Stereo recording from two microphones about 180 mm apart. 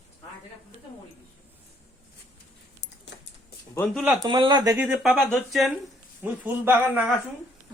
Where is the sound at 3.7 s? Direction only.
10° left (ahead or behind).